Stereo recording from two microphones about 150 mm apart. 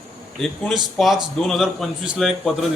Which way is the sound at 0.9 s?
Centre (ahead or behind).